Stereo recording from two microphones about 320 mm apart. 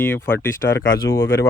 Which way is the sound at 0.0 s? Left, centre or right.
Centre.